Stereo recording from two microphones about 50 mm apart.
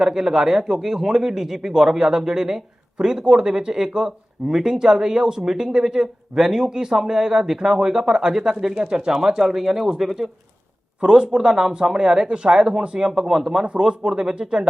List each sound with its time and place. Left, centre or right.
0.0 s a man's voice: centre